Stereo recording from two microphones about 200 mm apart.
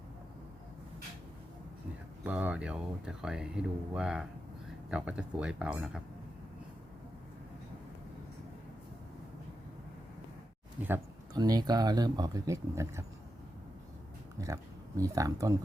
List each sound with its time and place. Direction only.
2.2 s speech: 5° right (ahead or behind)
10.8 s speech: 15° right (ahead or behind)
14.3 s speech: 15° right (ahead or behind)